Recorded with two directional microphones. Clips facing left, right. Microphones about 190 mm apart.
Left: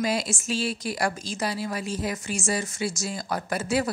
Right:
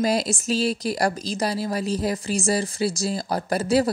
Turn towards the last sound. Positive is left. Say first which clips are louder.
# right 5 dB
turn(degrees=-35)  # may be behind; listen again after turning